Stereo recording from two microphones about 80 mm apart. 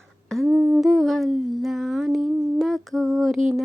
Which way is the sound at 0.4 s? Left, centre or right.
Right.